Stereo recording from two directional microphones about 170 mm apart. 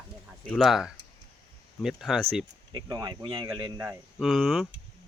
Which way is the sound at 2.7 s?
20° right (ahead or behind).